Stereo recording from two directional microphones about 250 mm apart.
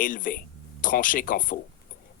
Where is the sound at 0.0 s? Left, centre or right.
Left.